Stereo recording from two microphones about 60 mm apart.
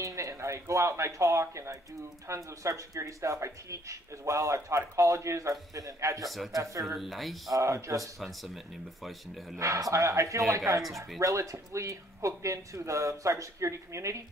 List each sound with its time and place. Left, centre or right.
0.0 s speech: right
7.0 s speech: centre
7.5 s speech: right
9.6 s speech: right